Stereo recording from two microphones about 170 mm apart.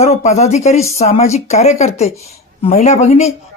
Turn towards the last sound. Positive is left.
turn(degrees=40)  # may be behind; listen again after turning